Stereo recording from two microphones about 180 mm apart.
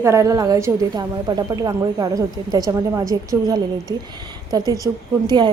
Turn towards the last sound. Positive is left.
turn(degrees=-25)  # may be behind; listen again after turning